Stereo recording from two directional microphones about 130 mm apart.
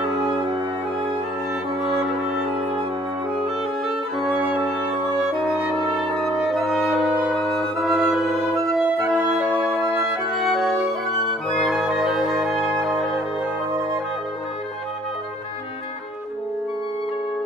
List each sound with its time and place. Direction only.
0.0 s music: centre (ahead or behind)
1.8 s music: centre (ahead or behind)
4.2 s music: 10° right (ahead or behind)